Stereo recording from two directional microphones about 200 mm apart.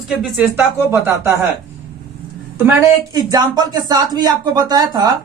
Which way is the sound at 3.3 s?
20° right (ahead or behind).